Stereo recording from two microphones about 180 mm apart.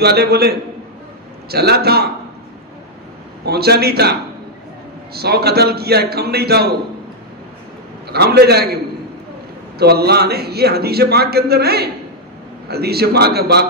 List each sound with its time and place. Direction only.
0.0 s a man's voice: 65° right (ahead or behind)
3.4 s a man's voice: 60° right (ahead or behind)
8.1 s a man's voice: 65° right (ahead or behind)
9.8 s a man's voice: 60° right (ahead or behind)